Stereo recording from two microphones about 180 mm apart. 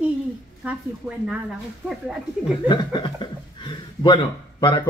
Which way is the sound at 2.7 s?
25° left (ahead or behind).